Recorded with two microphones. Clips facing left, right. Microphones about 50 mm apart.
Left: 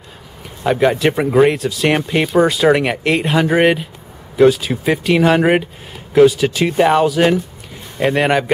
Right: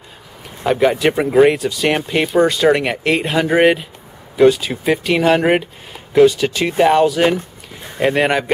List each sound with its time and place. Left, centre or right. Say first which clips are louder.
0.7 s speech: even; centre